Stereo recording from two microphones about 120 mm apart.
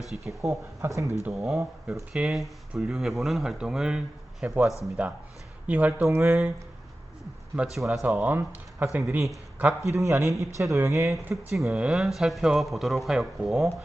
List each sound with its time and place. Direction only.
0.1 s speech: 10° right (ahead or behind)
0.4 s speech: 25° right (ahead or behind)
1.3 s speech: centre (ahead or behind)
6.0 s speech: 25° right (ahead or behind)
7.5 s speech: 5° right (ahead or behind)
8.0 s speech: 15° right (ahead or behind)
9.8 s speech: 25° right (ahead or behind)
11.5 s speech: 5° right (ahead or behind)